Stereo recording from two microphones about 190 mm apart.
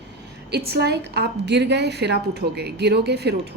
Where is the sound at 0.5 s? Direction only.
55° right (ahead or behind).